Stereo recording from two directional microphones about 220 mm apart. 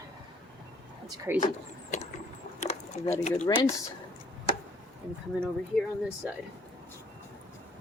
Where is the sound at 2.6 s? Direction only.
30° left (ahead or behind).